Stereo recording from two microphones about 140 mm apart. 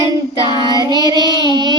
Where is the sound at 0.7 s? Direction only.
30° left (ahead or behind).